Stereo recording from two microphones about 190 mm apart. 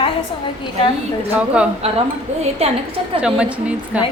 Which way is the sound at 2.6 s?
35° right (ahead or behind).